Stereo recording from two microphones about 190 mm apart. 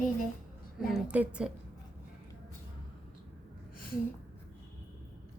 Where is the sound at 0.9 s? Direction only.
5° right (ahead or behind).